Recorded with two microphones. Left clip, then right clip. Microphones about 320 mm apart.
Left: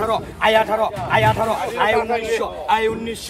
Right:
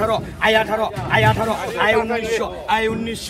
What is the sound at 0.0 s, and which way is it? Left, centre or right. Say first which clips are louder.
A man's voice: even; left.